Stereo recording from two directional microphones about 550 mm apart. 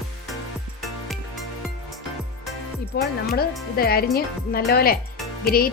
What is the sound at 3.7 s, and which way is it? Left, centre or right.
A woman's voice, centre.